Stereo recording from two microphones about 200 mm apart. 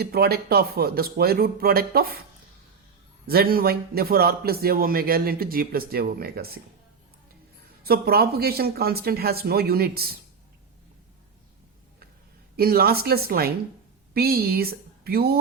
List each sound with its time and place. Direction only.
0.0 s a man's voice: 50° right (ahead or behind)
3.2 s a man's voice: 50° right (ahead or behind)
7.9 s a man's voice: 50° right (ahead or behind)
12.5 s a man's voice: 50° right (ahead or behind)